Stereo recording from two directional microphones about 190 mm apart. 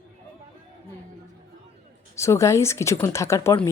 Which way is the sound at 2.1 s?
15° left (ahead or behind).